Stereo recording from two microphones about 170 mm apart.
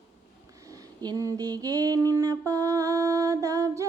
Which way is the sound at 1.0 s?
20° right (ahead or behind).